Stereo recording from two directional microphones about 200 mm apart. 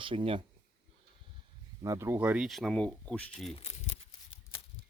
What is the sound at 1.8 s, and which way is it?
Speech, 15° right (ahead or behind).